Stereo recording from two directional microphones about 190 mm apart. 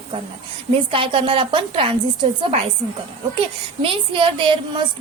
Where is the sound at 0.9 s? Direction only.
25° right (ahead or behind).